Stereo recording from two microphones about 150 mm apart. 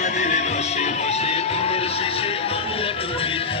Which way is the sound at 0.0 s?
50° left (ahead or behind).